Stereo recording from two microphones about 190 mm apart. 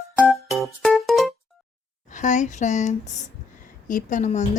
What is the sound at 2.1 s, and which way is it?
A woman's voice, 40° left (ahead or behind).